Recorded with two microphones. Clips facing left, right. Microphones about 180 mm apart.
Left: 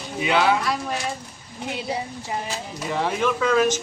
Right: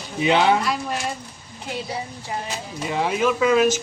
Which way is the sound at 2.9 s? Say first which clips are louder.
Right 2 dB; 10° right (ahead or behind).